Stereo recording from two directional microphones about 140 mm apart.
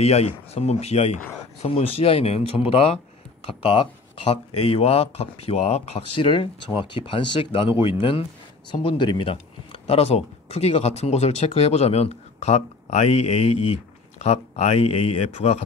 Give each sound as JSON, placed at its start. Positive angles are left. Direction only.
{"t": 0.0, "sound": "speech", "side_deg": 50}